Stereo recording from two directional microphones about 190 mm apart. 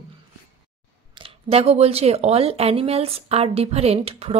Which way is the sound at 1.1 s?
30° right (ahead or behind).